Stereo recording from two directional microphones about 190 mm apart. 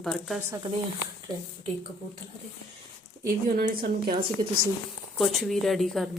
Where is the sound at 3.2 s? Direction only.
50° right (ahead or behind).